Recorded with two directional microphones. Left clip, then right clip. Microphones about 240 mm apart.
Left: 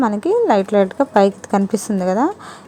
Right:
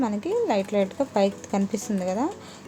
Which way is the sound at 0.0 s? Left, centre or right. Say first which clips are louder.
Left 9 dB; left.